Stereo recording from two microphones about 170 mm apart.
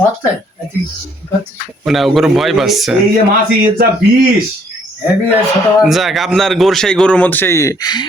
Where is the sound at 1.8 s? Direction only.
Centre (ahead or behind).